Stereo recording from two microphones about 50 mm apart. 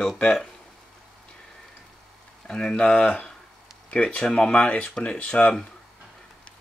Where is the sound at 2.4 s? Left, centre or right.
Centre.